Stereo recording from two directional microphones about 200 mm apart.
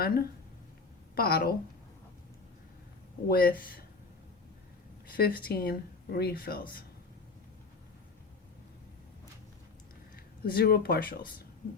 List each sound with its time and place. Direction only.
0.0 s a woman's voice: 50° left (ahead or behind)
3.2 s speech: 50° left (ahead or behind)
5.0 s speech: 50° left (ahead or behind)
10.4 s speech: 50° left (ahead or behind)